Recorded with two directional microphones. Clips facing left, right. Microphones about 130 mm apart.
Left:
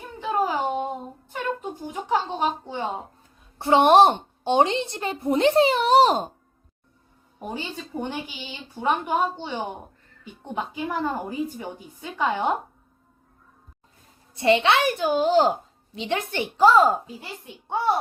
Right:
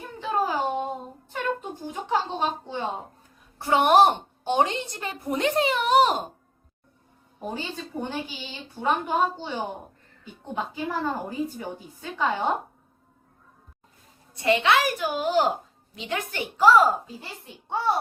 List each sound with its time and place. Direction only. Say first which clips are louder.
0.2 s a sound: left 1 dB; 15° left (ahead or behind)
1.3 s speech: even; 15° left (ahead or behind)
3.6 s a woman's voice: left 3 dB; 30° left (ahead or behind)
7.5 s a woman's voice: left 2 dB; 10° left (ahead or behind)
9.3 s a woman's voice: left 1 dB; centre (ahead or behind)
10.9 s a woman's voice: left 2 dB; 10° left (ahead or behind)
14.3 s a woman's voice: left 2 dB; 25° left (ahead or behind)